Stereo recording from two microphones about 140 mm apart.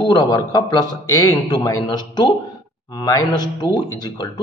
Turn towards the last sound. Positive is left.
turn(degrees=30)  # may be behind; listen again after turning